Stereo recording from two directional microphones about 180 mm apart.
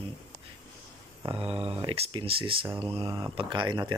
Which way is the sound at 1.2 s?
30° right (ahead or behind).